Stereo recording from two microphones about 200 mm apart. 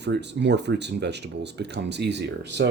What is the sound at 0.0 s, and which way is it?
Speech, 60° right (ahead or behind).